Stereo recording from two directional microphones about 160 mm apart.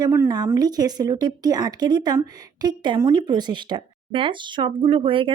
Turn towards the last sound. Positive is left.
turn(degrees=-35)  # may be behind; listen again after turning